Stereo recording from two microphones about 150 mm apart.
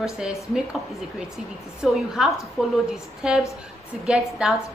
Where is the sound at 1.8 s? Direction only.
5° right (ahead or behind).